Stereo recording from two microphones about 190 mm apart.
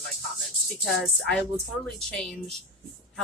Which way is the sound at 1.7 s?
90° left.